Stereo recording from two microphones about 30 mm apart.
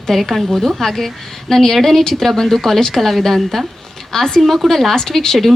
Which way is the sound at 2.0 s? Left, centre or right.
Centre.